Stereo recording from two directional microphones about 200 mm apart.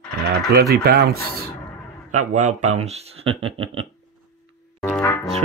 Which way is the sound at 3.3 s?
25° right (ahead or behind).